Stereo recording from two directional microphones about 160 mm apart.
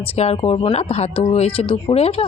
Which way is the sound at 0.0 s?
40° left (ahead or behind).